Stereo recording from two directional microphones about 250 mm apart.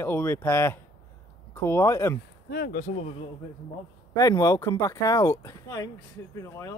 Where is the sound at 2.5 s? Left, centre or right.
Left.